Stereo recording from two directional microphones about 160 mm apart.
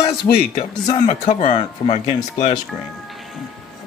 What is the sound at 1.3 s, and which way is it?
A man's voice, 50° left (ahead or behind).